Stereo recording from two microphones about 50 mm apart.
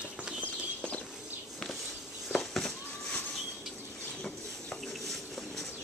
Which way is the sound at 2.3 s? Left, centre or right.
Centre.